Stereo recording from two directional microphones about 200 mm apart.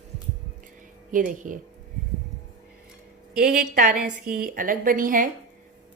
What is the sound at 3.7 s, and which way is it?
Speech, 40° right (ahead or behind).